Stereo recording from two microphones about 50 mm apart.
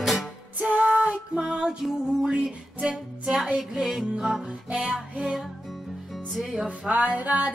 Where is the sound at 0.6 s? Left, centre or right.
Right.